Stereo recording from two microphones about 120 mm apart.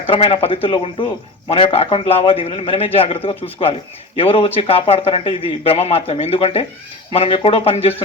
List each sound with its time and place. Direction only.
0.1 s speech: 50° left (ahead or behind)